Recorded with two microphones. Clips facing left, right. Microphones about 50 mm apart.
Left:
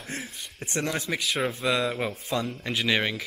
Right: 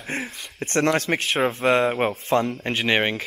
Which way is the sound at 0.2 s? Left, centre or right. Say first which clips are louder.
Right 6 dB; right.